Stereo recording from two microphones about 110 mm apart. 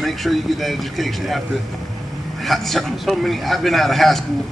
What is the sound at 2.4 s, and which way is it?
A man's voice, centre (ahead or behind).